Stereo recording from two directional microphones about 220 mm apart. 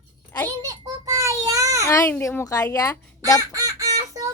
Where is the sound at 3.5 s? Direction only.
15° right (ahead or behind).